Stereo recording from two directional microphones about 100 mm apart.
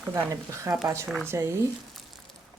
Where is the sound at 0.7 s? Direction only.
30° right (ahead or behind).